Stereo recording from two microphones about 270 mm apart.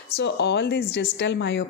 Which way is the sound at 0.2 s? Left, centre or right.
Left.